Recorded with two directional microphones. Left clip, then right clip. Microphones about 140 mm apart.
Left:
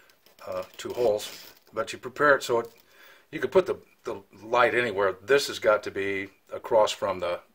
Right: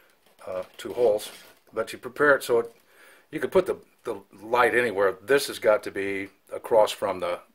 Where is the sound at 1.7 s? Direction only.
25° right (ahead or behind).